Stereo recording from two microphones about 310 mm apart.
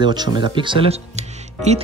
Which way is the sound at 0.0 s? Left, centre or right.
Centre.